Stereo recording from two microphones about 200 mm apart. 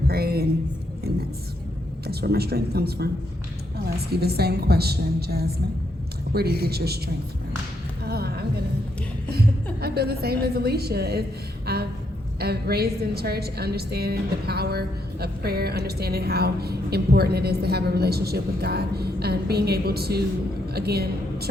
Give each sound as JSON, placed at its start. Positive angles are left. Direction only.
{"t": 0.1, "sound": "a woman's voice", "side_deg": -50}
{"t": 4.1, "sound": "a woman's voice", "side_deg": -50}
{"t": 6.6, "sound": "a woman's voice", "side_deg": -50}
{"t": 8.0, "sound": "music", "side_deg": -50}
{"t": 9.8, "sound": "a woman's voice", "side_deg": -50}
{"t": 11.6, "sound": "a sound", "side_deg": -50}
{"t": 12.4, "sound": "a woman's voice", "side_deg": -50}